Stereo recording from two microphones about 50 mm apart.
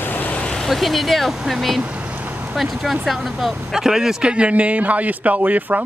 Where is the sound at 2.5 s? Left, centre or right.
Centre; by 5.9 s right.